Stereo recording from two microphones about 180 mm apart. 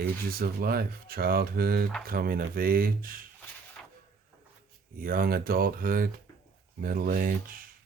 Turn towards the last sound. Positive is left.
turn(degrees=-50)  # may be behind; listen again after turning